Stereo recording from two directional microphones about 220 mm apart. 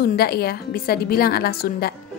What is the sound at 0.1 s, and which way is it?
A woman's voice, 45° left (ahead or behind).